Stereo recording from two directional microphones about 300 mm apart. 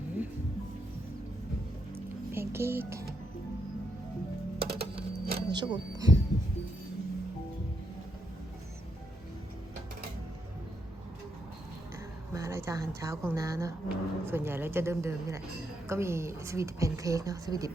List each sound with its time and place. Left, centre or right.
2.3 s speech: centre
4.6 s music: right
5.5 s speech: centre
12.3 s speech: centre